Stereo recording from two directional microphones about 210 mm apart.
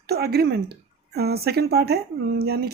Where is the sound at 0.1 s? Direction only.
50° right (ahead or behind).